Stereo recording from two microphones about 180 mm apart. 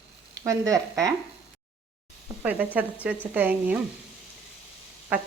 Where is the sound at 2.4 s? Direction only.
10° right (ahead or behind).